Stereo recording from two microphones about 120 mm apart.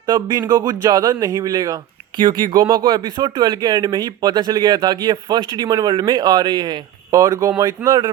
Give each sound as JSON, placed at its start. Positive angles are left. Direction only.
{"t": 0.1, "sound": "speech", "side_deg": -35}
{"t": 2.1, "sound": "speech", "side_deg": -40}